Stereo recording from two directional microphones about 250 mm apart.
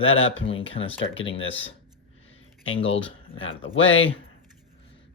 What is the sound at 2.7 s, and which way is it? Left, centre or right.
Speech, left.